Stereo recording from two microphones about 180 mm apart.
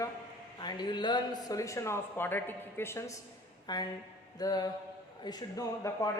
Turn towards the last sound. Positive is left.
turn(degrees=20)  # may be behind; listen again after turning